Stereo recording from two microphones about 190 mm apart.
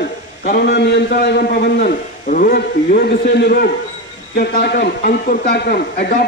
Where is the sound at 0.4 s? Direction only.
50° left (ahead or behind).